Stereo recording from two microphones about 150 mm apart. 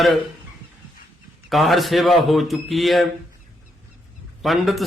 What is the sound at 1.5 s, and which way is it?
Speech, centre (ahead or behind).